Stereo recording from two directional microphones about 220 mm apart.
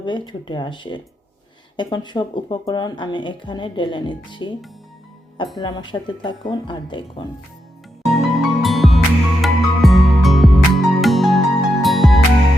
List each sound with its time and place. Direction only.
0.0 s speech: 20° left (ahead or behind)
5.5 s speech: 20° left (ahead or behind)
8.0 s music: centre (ahead or behind)